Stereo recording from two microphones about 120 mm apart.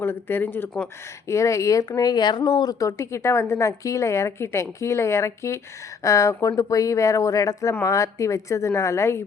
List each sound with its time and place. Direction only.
0.0 s speech: 20° left (ahead or behind)